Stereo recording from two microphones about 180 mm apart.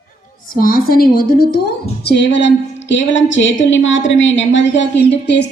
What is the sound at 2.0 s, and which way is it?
Speech, 70° left (ahead or behind).